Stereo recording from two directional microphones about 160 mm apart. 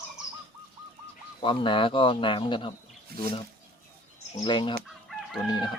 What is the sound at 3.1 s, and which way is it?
Speech, 70° right (ahead or behind).